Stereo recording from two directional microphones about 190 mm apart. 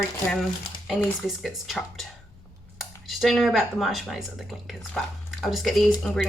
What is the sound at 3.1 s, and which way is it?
Speech, centre (ahead or behind).